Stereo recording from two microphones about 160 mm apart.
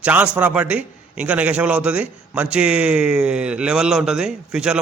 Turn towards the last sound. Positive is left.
turn(degrees=-5)  # may be behind; listen again after turning